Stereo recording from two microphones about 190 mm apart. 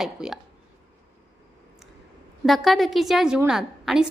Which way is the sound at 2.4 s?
Centre (ahead or behind).